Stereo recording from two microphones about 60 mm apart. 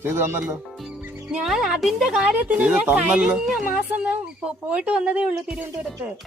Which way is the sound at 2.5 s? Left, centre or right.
Right.